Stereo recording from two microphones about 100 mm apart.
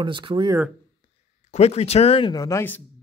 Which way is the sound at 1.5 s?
90° left.